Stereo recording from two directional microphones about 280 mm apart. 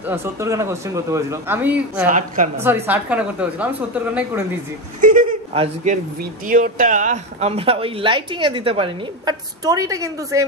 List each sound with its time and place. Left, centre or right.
0.0 s speech: centre
2.0 s speech: right
2.6 s a woman's voice: centre
5.0 s a sound: right
6.4 s speech: right; by 10.4 s centre